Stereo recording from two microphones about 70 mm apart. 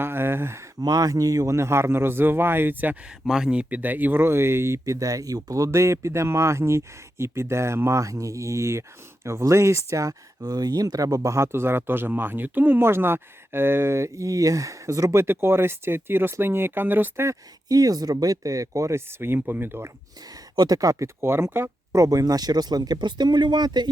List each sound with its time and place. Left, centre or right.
0.0 s speech: right
0.8 s speech: right
3.2 s speech: centre; by 4.9 s right
4.9 s speech: right
10.4 s speech: right
15.1 s speech: right
17.7 s speech: right
20.2 s speech: right
22.0 s speech: right